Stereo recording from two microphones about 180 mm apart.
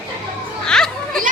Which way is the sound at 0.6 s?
5° left (ahead or behind).